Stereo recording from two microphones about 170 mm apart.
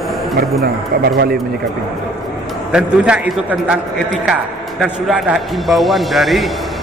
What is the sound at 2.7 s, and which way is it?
A man's voice, 5° right (ahead or behind).